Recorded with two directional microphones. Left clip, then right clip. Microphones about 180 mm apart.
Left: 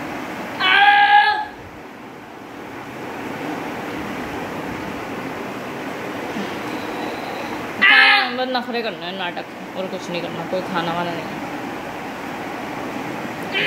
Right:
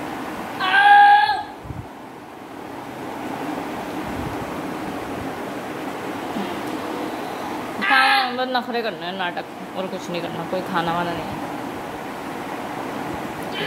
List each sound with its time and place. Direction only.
0.6 s child singing: 50° right (ahead or behind)
7.8 s child singing: 40° right (ahead or behind)
8.4 s speech: 5° left (ahead or behind)